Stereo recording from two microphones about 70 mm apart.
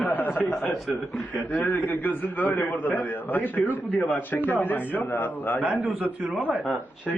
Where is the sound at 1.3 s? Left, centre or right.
Left.